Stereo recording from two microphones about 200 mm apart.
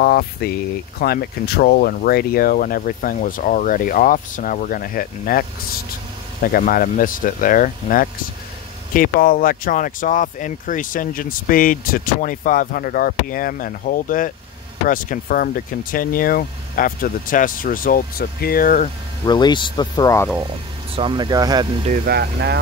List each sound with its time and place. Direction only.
0.0 s speech: 50° left (ahead or behind)
6.4 s speech: 45° left (ahead or behind)
19.2 s speech: 20° left (ahead or behind)
20.9 s speech: 25° right (ahead or behind)
21.8 s speech: 50° right (ahead or behind)